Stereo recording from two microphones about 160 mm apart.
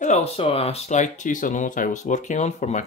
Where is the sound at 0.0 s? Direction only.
45° left (ahead or behind).